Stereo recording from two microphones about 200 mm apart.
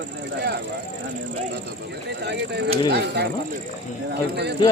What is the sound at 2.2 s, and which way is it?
Speech, 55° right (ahead or behind).